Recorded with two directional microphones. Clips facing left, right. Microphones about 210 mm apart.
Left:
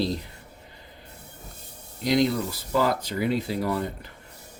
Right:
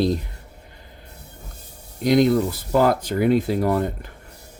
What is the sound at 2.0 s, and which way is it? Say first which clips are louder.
Speech: right 6 dB; 50° right (ahead or behind).